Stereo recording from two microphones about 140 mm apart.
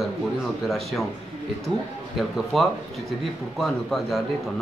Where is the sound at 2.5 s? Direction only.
Centre (ahead or behind).